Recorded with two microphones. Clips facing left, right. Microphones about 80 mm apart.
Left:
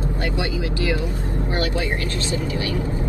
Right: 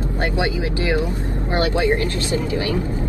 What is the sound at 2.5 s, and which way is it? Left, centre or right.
Speech, right.